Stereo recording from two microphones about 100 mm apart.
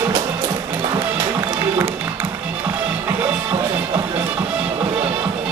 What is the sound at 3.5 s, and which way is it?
Music, 30° right (ahead or behind).